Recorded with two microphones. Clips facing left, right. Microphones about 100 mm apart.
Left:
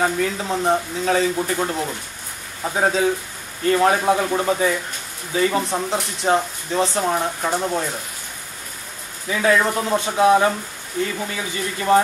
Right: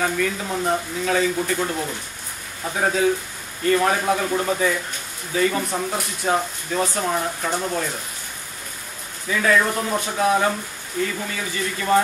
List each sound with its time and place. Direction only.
0.0 s speech: 30° left (ahead or behind)
9.3 s speech: 20° left (ahead or behind)